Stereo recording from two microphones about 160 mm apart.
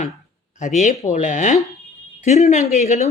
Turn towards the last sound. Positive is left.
turn(degrees=45)  # may be behind; listen again after turning